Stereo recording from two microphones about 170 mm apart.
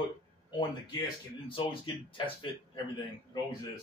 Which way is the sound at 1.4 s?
30° left (ahead or behind).